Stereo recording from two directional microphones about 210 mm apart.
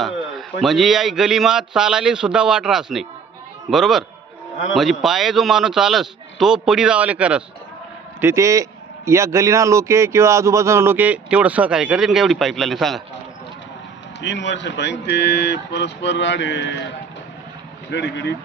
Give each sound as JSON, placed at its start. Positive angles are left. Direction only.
{"t": 0.0, "sound": "a man's voice", "side_deg": 0}
{"t": 14.2, "sound": "speech", "side_deg": 55}
{"t": 17.9, "sound": "speech", "side_deg": 55}